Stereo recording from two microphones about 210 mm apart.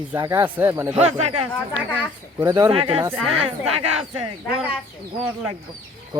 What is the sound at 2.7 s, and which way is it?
Speech, 25° right (ahead or behind).